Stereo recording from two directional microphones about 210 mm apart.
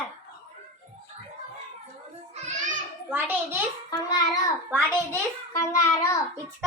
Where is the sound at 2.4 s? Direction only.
35° right (ahead or behind).